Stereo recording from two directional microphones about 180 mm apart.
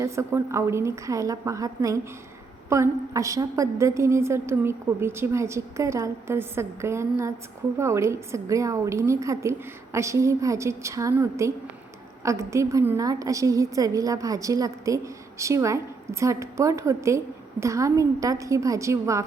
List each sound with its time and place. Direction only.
0.0 s a woman's voice: 15° right (ahead or behind)